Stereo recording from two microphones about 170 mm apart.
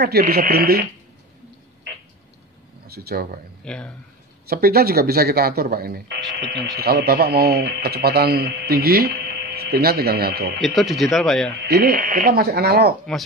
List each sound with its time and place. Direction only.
0.0 s speech: 65° right (ahead or behind)
2.9 s speech: 65° right (ahead or behind)
3.6 s speech: 5° left (ahead or behind)
4.5 s speech: 65° right (ahead or behind)
10.6 s speech: centre (ahead or behind)
11.6 s speech: 70° right (ahead or behind)